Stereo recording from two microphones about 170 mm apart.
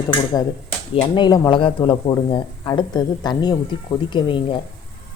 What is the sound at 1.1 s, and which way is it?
Speech, 25° left (ahead or behind).